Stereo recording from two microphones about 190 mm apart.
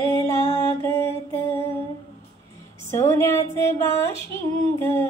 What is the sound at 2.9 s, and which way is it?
Female singing, 15° left (ahead or behind).